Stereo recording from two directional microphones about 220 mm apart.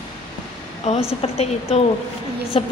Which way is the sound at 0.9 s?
30° left (ahead or behind).